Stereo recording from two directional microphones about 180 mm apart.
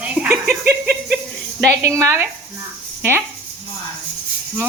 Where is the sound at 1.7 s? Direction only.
15° right (ahead or behind).